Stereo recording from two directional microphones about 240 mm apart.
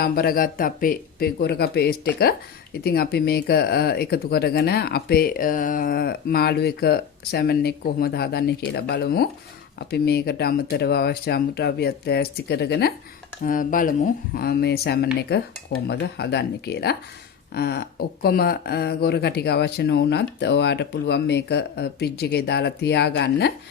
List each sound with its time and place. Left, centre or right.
0.0 s speech: left